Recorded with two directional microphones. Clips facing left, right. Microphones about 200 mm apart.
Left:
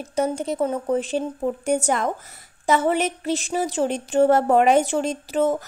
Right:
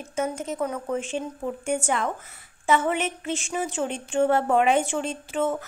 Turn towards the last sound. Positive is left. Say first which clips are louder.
# left 5 dB
turn(degrees=40)  # may be behind; listen again after turning